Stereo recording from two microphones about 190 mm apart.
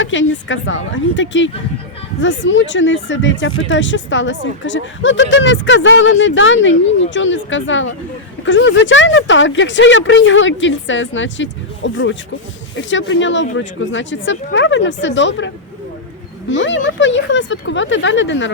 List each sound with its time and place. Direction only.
0.0 s a woman's voice: 75° left (ahead or behind)